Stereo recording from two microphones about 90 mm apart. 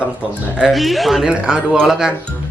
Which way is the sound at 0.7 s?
Centre (ahead or behind).